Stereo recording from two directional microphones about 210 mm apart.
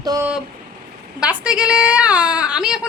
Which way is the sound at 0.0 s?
20° right (ahead or behind).